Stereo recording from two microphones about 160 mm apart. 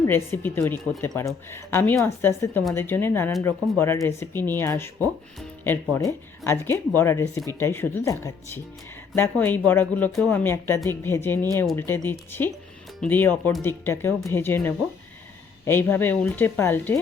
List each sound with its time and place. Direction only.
0.0 s a woman's voice: 15° left (ahead or behind)